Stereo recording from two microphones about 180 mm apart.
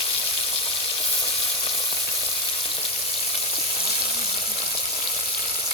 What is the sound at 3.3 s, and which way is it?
Frying, 35° left (ahead or behind).